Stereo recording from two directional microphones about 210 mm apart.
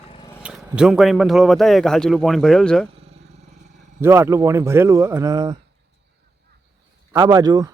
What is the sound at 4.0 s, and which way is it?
Speech, 10° right (ahead or behind).